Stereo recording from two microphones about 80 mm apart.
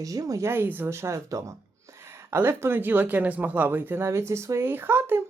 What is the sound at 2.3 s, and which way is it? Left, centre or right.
Speech, right.